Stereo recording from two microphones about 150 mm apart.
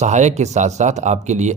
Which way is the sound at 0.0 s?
50° right (ahead or behind).